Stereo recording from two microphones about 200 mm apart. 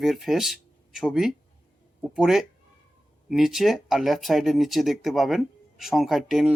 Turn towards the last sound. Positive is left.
turn(degrees=0)  # may be behind; listen again after turning